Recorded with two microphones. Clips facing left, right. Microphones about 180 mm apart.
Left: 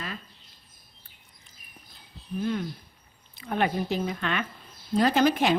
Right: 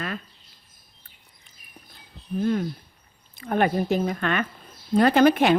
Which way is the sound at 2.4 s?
45° right (ahead or behind).